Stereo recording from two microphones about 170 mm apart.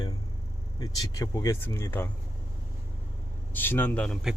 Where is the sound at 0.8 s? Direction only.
20° left (ahead or behind).